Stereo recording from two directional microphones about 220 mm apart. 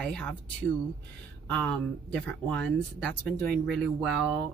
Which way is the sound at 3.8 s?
Centre (ahead or behind).